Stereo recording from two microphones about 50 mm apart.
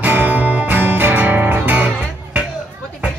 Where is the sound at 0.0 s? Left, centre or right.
Right.